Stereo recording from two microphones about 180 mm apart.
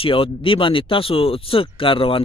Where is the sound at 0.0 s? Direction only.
30° left (ahead or behind).